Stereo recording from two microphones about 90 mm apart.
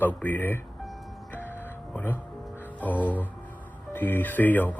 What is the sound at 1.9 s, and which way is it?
A man's voice, 20° left (ahead or behind).